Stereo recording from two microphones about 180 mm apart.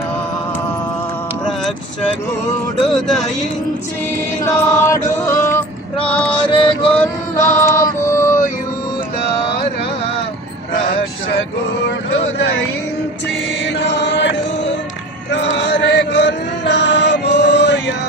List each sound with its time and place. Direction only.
2.8 s speech: centre (ahead or behind)
4.4 s male singing: 15° left (ahead or behind)
6.9 s music: 15° left (ahead or behind)
13.7 s chant: 75° left (ahead or behind)
15.3 s music: 75° left (ahead or behind)